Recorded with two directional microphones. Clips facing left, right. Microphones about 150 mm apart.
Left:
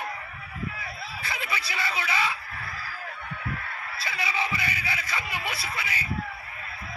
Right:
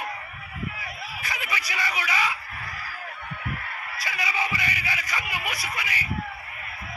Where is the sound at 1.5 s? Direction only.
15° right (ahead or behind).